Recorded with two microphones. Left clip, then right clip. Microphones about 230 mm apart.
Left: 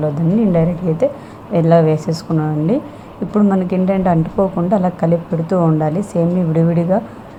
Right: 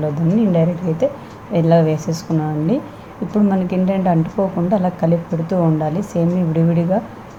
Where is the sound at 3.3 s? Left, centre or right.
Centre.